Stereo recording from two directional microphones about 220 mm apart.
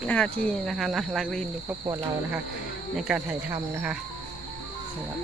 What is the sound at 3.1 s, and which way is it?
Speech, 5° right (ahead or behind).